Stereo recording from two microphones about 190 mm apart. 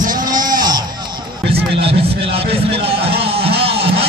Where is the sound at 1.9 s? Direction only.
30° right (ahead or behind).